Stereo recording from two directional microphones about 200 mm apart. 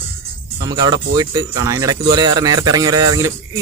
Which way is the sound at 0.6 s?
20° right (ahead or behind).